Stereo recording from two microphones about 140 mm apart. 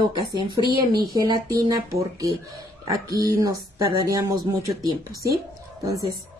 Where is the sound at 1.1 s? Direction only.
25° right (ahead or behind).